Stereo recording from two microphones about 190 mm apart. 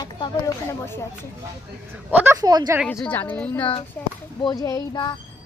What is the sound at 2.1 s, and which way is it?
Speech, 10° right (ahead or behind).